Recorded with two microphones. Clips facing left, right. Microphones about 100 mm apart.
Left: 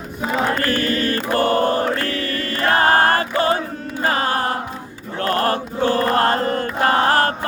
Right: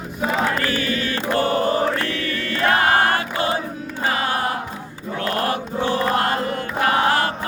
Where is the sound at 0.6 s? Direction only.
45° left (ahead or behind).